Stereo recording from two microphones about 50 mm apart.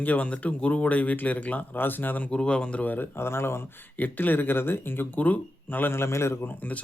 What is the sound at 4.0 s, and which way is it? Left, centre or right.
Speech, left.